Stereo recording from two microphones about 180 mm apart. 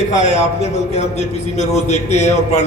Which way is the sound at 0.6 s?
35° left (ahead or behind).